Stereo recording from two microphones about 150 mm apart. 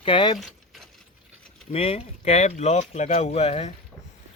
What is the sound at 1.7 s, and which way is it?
Speech, 40° left (ahead or behind).